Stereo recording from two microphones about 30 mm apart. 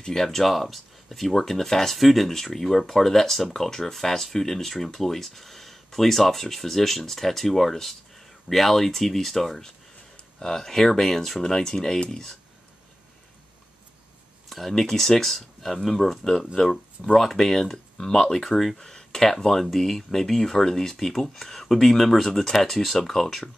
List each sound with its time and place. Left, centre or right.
0.0 s speech: centre
2.0 s speech: centre
14.5 s speech: centre
18.8 s speech: centre